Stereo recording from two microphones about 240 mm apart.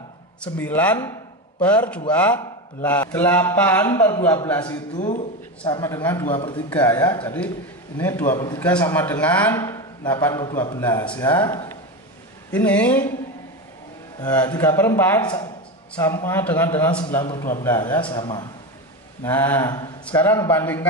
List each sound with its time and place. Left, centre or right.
0.4 s a man's voice: centre
4.9 s speech: left
5.8 s a man's voice: centre
6.7 s a man's voice: centre
14.2 s a man's voice: centre